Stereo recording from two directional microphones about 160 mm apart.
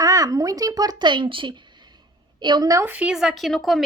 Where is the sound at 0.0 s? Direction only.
20° right (ahead or behind).